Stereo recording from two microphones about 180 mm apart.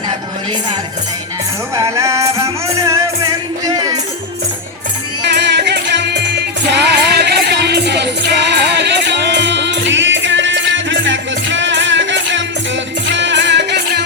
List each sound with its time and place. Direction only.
1.7 s music: 15° right (ahead or behind)
5.3 s music: 70° right (ahead or behind)